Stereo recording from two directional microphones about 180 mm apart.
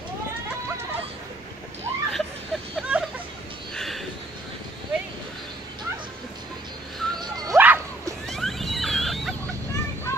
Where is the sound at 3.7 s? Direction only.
Centre (ahead or behind).